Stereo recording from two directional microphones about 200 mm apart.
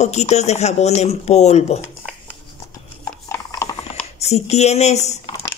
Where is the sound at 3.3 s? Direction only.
15° left (ahead or behind).